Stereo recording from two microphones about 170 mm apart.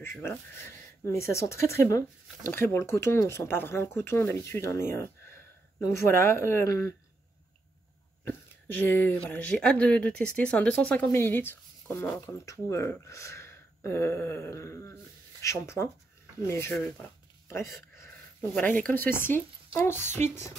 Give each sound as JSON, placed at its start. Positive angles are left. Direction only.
{"t": 0.0, "sound": "speech", "side_deg": 15}
{"t": 8.3, "sound": "speech", "side_deg": 10}